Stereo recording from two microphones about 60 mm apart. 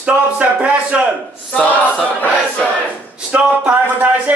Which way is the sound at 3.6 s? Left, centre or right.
Right.